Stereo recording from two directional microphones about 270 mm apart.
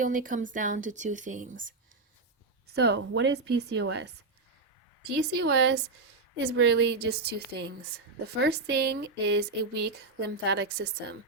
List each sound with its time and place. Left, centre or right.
0.0 s speech: right
2.6 s speech: right
5.2 s speech: right